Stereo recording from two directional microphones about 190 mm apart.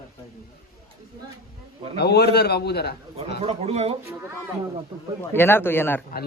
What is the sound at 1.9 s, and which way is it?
A man's voice, 60° left (ahead or behind).